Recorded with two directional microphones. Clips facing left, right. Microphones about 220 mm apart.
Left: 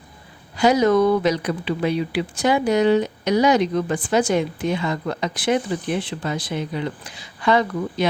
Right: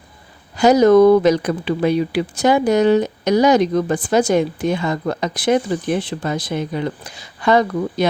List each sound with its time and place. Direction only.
0.5 s speech: 45° right (ahead or behind)